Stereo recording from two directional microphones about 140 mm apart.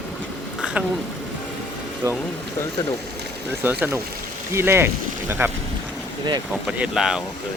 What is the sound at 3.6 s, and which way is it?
Speech, 15° right (ahead or behind).